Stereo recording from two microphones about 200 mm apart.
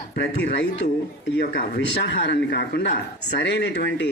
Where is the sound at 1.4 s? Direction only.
55° left (ahead or behind).